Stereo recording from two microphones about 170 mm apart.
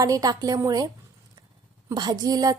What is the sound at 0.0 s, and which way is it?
Speech, 20° right (ahead or behind).